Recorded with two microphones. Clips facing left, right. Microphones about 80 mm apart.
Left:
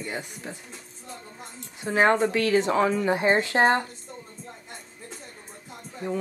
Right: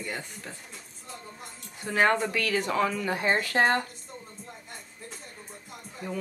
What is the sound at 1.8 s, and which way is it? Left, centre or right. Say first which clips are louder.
Speech: left 3 dB; left.